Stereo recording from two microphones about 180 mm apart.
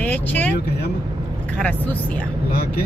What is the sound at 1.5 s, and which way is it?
Speech, 10° left (ahead or behind).